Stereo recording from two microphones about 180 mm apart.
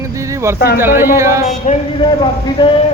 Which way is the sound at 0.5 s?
60° left (ahead or behind).